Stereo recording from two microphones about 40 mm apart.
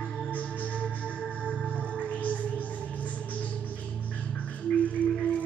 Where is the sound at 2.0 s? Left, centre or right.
Left.